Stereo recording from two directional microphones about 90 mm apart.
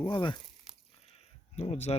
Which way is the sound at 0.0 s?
60° left (ahead or behind).